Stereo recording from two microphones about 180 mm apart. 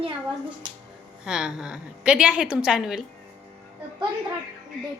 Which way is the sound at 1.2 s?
5° right (ahead or behind).